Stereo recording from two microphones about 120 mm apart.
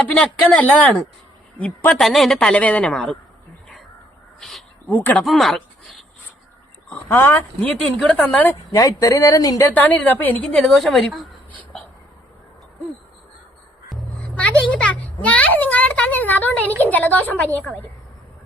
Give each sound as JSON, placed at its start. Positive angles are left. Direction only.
{"t": 0.2, "sound": "speech", "side_deg": 10}
{"t": 2.0, "sound": "a woman's voice", "side_deg": 0}
{"t": 4.4, "sound": "a sound", "side_deg": 0}
{"t": 4.9, "sound": "speech", "side_deg": 15}
{"t": 5.2, "sound": "a sound", "side_deg": 0}
{"t": 6.9, "sound": "speech", "side_deg": 20}
{"t": 8.7, "sound": "speech", "side_deg": 25}
{"t": 9.7, "sound": "a woman's voice", "side_deg": 15}
{"t": 13.9, "sound": "a child's voice", "side_deg": 10}